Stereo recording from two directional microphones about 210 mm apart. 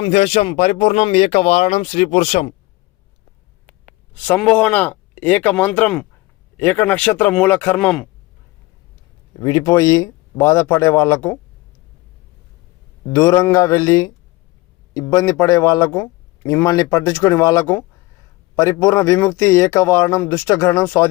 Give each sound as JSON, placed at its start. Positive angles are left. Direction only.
{"t": 0.0, "sound": "speech", "side_deg": 30}
{"t": 3.7, "sound": "speech", "side_deg": 5}
{"t": 9.4, "sound": "speech", "side_deg": 20}
{"t": 13.1, "sound": "speech", "side_deg": 15}
{"t": 15.1, "sound": "speech", "side_deg": 15}